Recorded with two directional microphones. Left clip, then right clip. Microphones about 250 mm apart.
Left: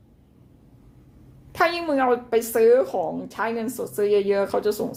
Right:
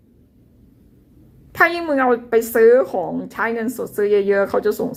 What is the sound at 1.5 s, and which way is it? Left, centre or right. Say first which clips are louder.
A woman's voice: right 5 dB; centre.